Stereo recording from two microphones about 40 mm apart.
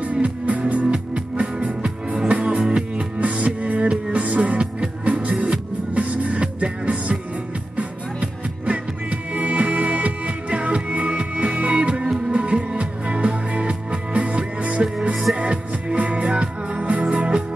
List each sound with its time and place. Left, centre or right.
0.0 s music: right
2.2 s music: right
2.6 s music: right
3.2 s music: right